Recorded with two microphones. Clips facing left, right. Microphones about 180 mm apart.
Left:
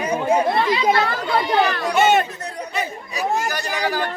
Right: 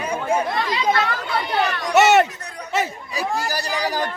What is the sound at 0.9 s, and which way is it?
Speech, 40° left (ahead or behind).